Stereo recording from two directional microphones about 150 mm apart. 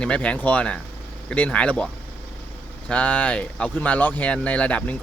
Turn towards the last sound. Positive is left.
turn(degrees=10)  # may be behind; listen again after turning